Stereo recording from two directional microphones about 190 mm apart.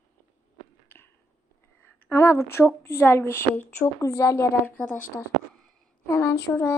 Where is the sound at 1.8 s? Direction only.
10° left (ahead or behind).